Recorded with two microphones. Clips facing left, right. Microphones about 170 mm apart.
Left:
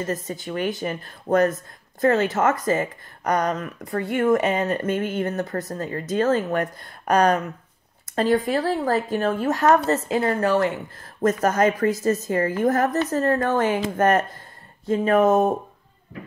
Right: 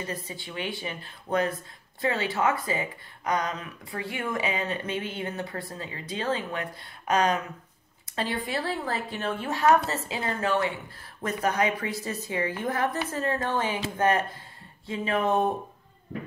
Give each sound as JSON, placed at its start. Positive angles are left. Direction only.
{"t": 0.0, "sound": "speech", "side_deg": 45}